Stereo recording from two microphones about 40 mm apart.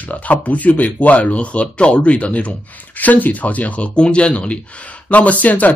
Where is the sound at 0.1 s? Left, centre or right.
Left.